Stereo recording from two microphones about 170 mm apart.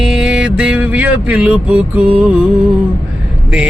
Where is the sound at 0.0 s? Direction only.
5° right (ahead or behind).